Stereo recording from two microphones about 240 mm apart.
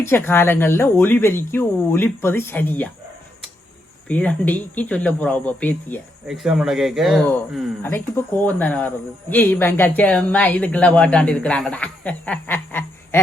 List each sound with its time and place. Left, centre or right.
0.0 s speech: centre
4.1 s speech: centre